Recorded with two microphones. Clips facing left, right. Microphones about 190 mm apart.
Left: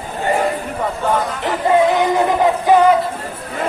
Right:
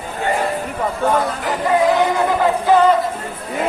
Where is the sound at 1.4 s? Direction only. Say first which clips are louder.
Left 2 dB; 25° left (ahead or behind).